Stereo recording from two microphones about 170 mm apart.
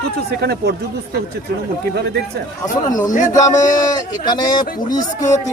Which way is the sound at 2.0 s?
70° right (ahead or behind).